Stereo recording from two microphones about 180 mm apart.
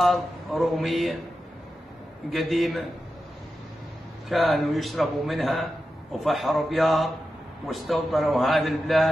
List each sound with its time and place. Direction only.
0.0 s a man's voice: centre (ahead or behind)
2.3 s a man's voice: centre (ahead or behind)
4.3 s a man's voice: centre (ahead or behind)